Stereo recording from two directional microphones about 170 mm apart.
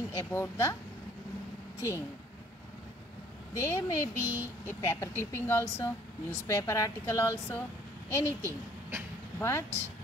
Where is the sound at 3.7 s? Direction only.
15° left (ahead or behind).